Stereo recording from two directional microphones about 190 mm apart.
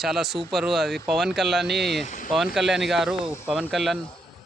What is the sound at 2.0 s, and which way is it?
Speech, 40° left (ahead or behind).